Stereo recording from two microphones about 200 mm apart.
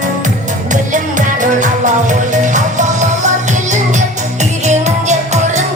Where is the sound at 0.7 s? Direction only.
40° right (ahead or behind).